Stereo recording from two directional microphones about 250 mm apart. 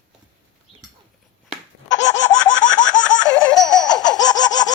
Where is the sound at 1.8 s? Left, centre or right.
Left.